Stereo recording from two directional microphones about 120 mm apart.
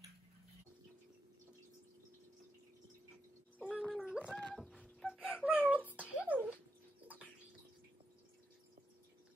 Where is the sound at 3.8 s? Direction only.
5° left (ahead or behind).